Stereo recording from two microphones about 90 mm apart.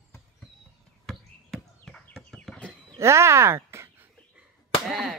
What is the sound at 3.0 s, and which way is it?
Speech, 30° right (ahead or behind).